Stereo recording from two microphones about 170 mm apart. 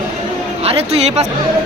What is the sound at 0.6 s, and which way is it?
Speech, 35° right (ahead or behind).